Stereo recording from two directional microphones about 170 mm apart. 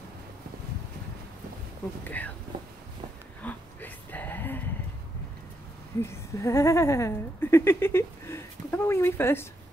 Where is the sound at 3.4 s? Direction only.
10° left (ahead or behind).